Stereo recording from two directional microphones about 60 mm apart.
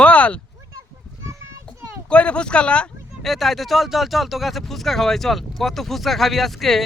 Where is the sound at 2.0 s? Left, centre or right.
Centre.